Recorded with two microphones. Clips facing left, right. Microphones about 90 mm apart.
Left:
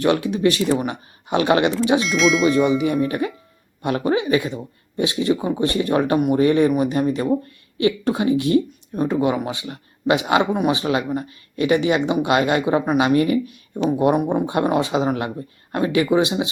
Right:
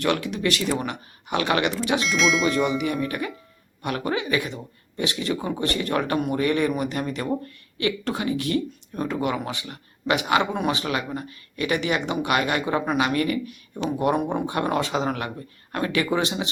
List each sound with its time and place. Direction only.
0.0 s speech: 20° left (ahead or behind)
2.0 s speech: centre (ahead or behind)
2.6 s speech: 25° left (ahead or behind)
14.0 s speech: 15° left (ahead or behind)